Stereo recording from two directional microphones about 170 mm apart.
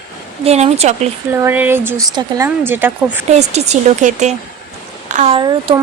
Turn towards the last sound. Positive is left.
turn(degrees=-30)  # may be behind; listen again after turning